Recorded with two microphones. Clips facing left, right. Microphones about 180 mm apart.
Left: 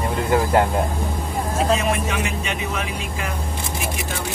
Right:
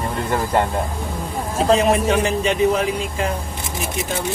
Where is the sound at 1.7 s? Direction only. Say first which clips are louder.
Right 9 dB; 35° right (ahead or behind).